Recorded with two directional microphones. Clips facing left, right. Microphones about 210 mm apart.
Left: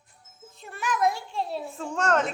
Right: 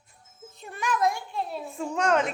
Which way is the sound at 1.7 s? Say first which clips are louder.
Right 1 dB; 10° right (ahead or behind).